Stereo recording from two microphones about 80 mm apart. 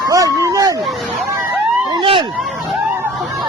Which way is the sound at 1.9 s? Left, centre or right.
Right.